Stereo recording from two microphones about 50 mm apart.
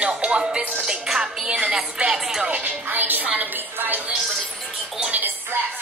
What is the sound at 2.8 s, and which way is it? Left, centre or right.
Music, right.